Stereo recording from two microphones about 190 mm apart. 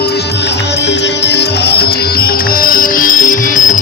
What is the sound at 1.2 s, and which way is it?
Music, 60° left (ahead or behind).